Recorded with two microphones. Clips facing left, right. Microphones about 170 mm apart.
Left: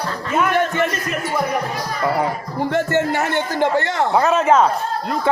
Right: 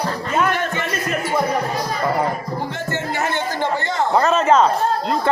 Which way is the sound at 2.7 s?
65° left (ahead or behind).